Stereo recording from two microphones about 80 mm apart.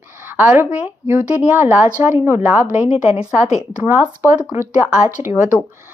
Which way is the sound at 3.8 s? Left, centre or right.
Right.